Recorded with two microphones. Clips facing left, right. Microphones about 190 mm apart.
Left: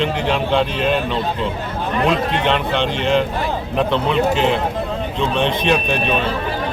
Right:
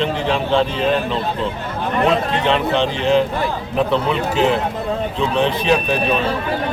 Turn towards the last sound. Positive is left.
turn(degrees=-5)  # may be behind; listen again after turning